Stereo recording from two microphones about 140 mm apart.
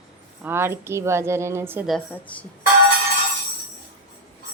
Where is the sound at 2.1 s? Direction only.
10° left (ahead or behind).